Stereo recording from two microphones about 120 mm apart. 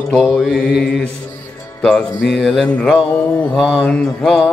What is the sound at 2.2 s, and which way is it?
Mantra, centre (ahead or behind).